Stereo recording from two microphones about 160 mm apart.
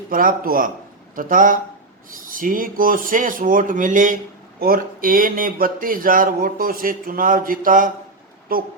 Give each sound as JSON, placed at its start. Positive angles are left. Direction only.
{"t": 0.1, "sound": "speech", "side_deg": -60}